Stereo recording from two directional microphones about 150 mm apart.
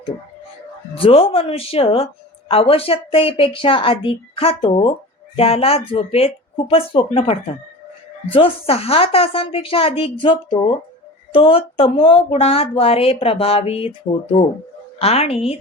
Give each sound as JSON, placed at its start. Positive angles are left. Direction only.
{"t": 0.9, "sound": "speech", "side_deg": 40}
{"t": 14.9, "sound": "a woman's voice", "side_deg": 40}